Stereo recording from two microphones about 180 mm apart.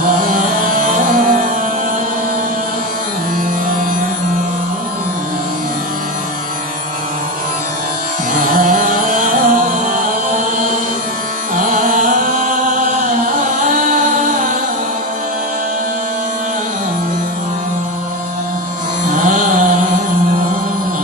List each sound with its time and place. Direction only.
0.1 s music: 50° right (ahead or behind)
8.3 s music: 50° right (ahead or behind)
11.5 s music: 45° right (ahead or behind)
19.0 s a sound: 45° right (ahead or behind)